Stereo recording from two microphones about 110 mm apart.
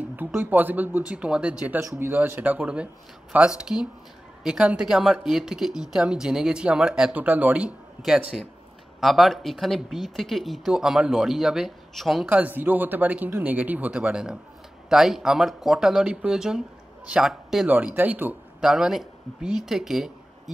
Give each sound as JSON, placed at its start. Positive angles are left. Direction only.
{"t": 0.4, "sound": "speech", "side_deg": -15}
{"t": 1.8, "sound": "speech", "side_deg": -25}
{"t": 9.0, "sound": "speech", "side_deg": 0}
{"t": 12.3, "sound": "speech", "side_deg": -15}
{"t": 17.6, "sound": "speech", "side_deg": -15}
{"t": 18.7, "sound": "speech", "side_deg": -5}